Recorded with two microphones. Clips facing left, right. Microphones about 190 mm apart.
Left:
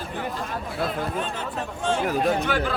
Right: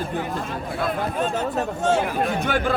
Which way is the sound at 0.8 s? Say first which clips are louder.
Right 4 dB; 45° right (ahead or behind).